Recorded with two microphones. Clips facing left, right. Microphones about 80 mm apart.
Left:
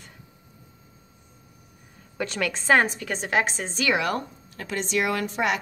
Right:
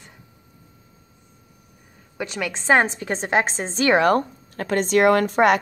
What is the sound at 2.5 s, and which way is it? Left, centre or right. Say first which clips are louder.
A woman's voice: right 3 dB; right.